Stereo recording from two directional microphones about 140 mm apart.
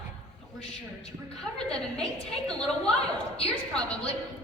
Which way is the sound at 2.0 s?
5° left (ahead or behind).